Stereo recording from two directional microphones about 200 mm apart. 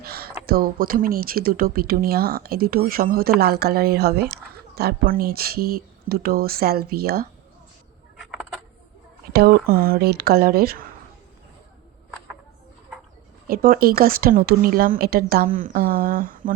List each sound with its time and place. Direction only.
0.0 s speech: 50° right (ahead or behind)
8.2 s a sound: centre (ahead or behind)
9.3 s speech: 50° right (ahead or behind)
13.5 s speech: 45° right (ahead or behind)